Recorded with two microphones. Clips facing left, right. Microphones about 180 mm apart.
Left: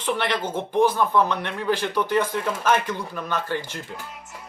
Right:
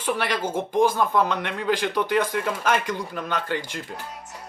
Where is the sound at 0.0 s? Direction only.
10° right (ahead or behind).